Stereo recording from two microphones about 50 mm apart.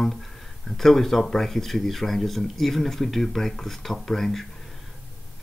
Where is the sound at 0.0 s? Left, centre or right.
Centre.